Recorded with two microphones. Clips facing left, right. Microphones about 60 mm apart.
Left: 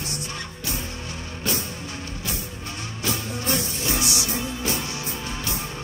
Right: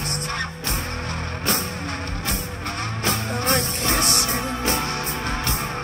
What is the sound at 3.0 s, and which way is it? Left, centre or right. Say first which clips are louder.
Music: right 3 dB; right.